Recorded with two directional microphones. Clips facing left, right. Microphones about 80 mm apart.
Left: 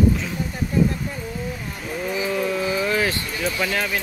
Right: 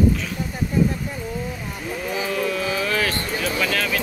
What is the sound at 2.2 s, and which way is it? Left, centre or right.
Speech, centre.